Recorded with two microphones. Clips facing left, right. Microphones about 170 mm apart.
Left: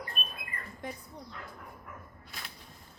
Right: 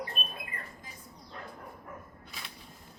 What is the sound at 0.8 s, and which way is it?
Speech, 65° left (ahead or behind).